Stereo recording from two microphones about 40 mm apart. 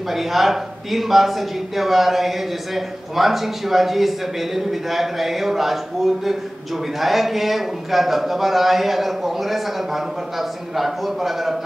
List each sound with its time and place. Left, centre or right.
0.1 s a man's voice: centre